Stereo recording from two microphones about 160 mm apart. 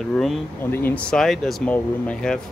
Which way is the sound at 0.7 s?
15° left (ahead or behind).